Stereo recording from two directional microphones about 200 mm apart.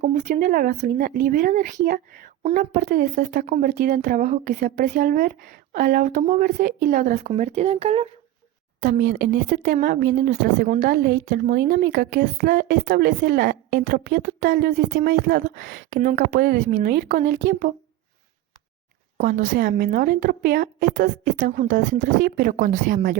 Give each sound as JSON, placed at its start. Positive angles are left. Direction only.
{"t": 0.0, "sound": "speech", "side_deg": -40}
{"t": 8.8, "sound": "speech", "side_deg": -40}
{"t": 19.1, "sound": "speech", "side_deg": -40}